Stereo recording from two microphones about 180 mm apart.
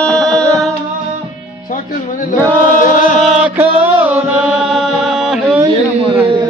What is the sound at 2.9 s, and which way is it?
Chant, 45° left (ahead or behind).